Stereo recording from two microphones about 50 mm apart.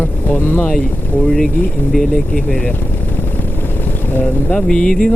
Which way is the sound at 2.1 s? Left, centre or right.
Centre.